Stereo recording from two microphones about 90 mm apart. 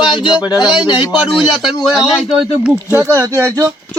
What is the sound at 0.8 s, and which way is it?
Speech, 60° left (ahead or behind).